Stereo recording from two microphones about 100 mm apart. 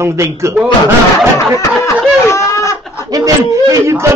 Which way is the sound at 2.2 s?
30° left (ahead or behind).